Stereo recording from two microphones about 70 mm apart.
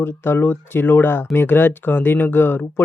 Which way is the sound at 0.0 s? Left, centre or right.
Left.